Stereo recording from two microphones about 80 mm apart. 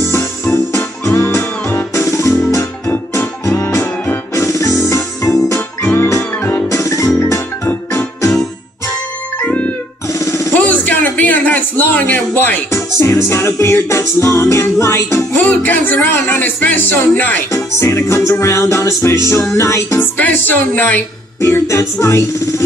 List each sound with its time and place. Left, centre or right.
0.1 s music: left
9.4 s music: centre
10.0 s music: left
10.5 s a sound: left
12.7 s music: left
15.3 s music: left
17.5 s music: left
20.0 s music: left
21.4 s music: left